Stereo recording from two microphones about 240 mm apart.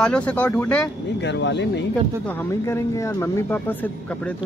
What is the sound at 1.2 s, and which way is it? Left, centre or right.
Speech, left.